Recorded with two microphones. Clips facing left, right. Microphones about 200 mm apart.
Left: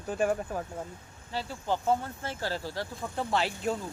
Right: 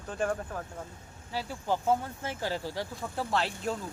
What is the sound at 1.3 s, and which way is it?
Speech, 10° right (ahead or behind).